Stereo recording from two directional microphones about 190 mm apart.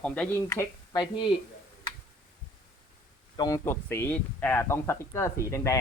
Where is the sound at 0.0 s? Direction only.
5° left (ahead or behind); by 1.3 s 20° left (ahead or behind).